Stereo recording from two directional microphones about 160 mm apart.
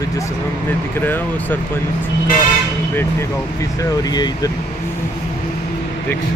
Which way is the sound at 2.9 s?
20° left (ahead or behind).